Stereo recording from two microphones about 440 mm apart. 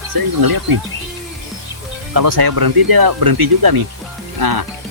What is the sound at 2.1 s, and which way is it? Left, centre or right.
Speech, right.